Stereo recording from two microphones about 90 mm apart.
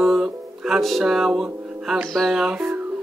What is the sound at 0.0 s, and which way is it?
Music, 5° right (ahead or behind).